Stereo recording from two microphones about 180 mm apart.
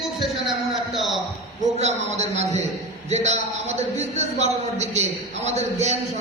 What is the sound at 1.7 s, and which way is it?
A man's voice, 40° right (ahead or behind).